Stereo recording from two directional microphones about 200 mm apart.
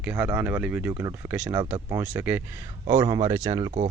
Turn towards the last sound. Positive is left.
turn(degrees=-20)  # may be behind; listen again after turning